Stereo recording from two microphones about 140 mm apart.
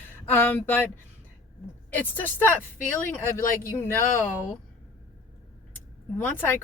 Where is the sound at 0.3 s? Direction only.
15° left (ahead or behind).